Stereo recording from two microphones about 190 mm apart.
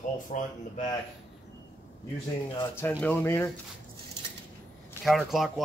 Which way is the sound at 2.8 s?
10° left (ahead or behind).